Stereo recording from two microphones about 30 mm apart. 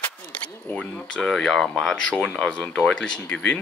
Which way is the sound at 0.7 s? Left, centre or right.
Left.